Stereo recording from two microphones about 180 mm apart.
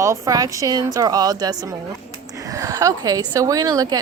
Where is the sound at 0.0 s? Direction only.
20° right (ahead or behind).